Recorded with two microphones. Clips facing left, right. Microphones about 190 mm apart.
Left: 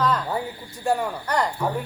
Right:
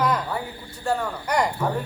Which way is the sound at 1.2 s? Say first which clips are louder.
Right 2 dB; 15° right (ahead or behind).